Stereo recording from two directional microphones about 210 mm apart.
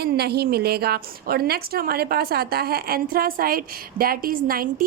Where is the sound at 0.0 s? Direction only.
50° right (ahead or behind).